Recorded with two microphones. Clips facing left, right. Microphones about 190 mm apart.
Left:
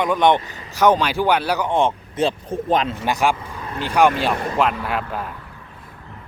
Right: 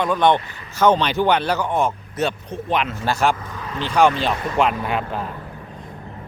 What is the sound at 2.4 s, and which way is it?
Speech, 45° left (ahead or behind).